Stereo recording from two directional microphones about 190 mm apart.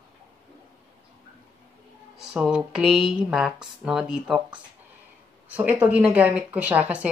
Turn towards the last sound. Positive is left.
turn(degrees=-5)  # may be behind; listen again after turning